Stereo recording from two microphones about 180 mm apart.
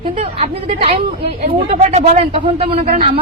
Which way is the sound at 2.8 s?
50° right (ahead or behind).